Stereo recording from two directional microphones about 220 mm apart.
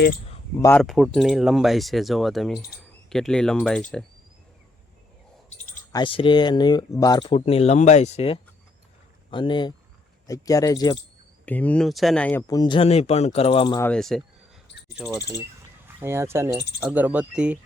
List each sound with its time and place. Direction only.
0.8 s speech: centre (ahead or behind)
5.9 s speech: 20° left (ahead or behind); by 12.5 s 5° left (ahead or behind)
12.5 s speech: 20° left (ahead or behind)
13.7 s speech: 5° left (ahead or behind)